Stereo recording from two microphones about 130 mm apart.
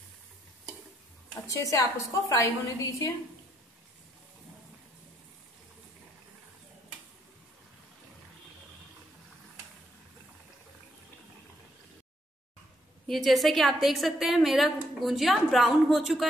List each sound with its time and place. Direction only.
1.5 s a woman's voice: 25° left (ahead or behind)
13.0 s a woman's voice: centre (ahead or behind)